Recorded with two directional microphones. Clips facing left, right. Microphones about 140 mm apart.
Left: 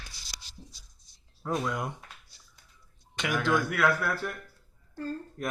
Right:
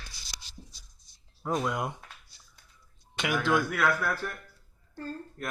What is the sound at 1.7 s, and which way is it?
Speech, 15° right (ahead or behind).